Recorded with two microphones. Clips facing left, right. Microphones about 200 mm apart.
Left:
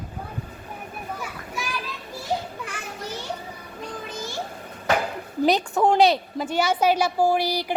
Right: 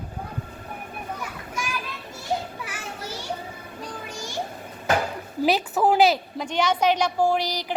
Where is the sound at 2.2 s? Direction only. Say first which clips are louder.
Even; 5° right (ahead or behind).